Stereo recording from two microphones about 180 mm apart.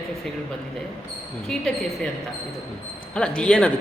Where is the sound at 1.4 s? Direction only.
5° left (ahead or behind).